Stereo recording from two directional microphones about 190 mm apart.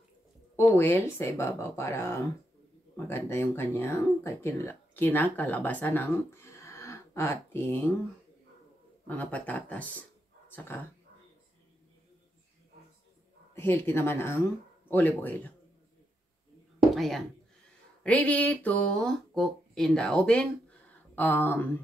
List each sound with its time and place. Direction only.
0.6 s speech: 10° left (ahead or behind)
9.0 s speech: 10° left (ahead or behind)
13.6 s speech: 10° left (ahead or behind)
16.9 s speech: centre (ahead or behind)
21.1 s a sound: 10° left (ahead or behind)